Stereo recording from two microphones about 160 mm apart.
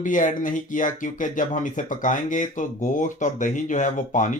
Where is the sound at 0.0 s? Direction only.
55° left (ahead or behind).